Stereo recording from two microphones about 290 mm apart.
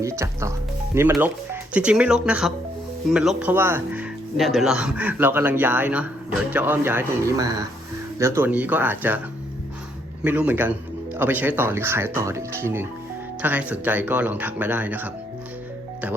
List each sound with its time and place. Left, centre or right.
0.0 s speech: centre
10.2 s speech: centre